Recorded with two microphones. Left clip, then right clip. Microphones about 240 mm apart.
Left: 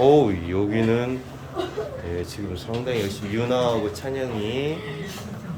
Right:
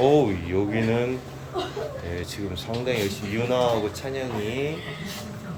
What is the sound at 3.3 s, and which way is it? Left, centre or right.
Speech, centre.